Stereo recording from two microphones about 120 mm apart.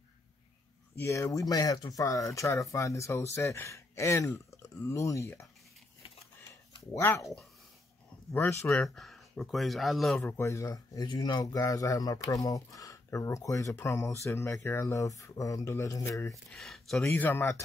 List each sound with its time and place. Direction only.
0.9 s speech: 25° left (ahead or behind)
6.9 s speech: 25° left (ahead or behind)
8.8 s speech: centre (ahead or behind)
10.1 s speech: 20° left (ahead or behind)
16.5 s speech: 5° left (ahead or behind)
17.1 s speech: 15° left (ahead or behind)